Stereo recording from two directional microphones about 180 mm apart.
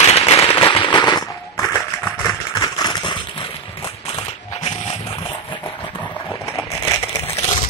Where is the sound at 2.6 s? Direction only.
25° left (ahead or behind).